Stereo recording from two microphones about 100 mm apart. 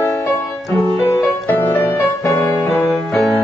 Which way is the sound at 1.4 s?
25° left (ahead or behind).